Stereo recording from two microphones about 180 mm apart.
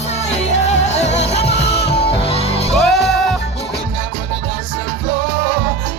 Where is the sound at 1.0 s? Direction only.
35° left (ahead or behind).